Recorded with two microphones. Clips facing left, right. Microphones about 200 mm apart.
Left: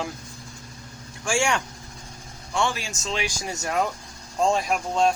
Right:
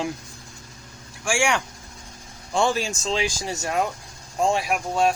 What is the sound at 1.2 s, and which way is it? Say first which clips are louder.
Speech: right 1 dB; 10° right (ahead or behind).